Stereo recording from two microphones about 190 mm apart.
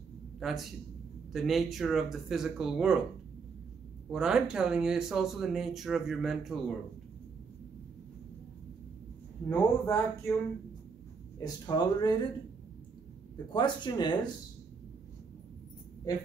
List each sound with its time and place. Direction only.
0.4 s speech: centre (ahead or behind)
4.1 s speech: 5° right (ahead or behind)
9.5 s speech: 10° left (ahead or behind)
11.6 s speech: 20° left (ahead or behind)
13.5 s speech: 25° left (ahead or behind)